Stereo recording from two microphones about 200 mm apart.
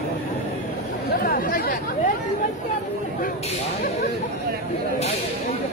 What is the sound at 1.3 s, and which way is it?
Chatter, 45° left (ahead or behind).